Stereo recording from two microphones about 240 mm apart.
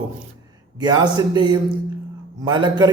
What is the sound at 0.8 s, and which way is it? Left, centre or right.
A man's voice, centre.